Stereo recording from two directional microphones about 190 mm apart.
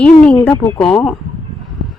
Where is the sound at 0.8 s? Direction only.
Centre (ahead or behind).